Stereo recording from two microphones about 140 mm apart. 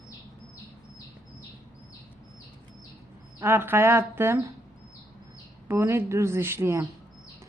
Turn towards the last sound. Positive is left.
turn(degrees=-15)  # may be behind; listen again after turning